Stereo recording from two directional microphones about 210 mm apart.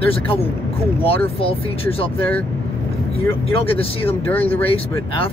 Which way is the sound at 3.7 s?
25° left (ahead or behind).